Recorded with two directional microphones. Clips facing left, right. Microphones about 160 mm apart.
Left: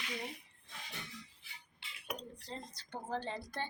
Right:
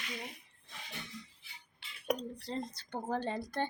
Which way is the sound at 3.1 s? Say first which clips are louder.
Right 4 dB; 45° right (ahead or behind).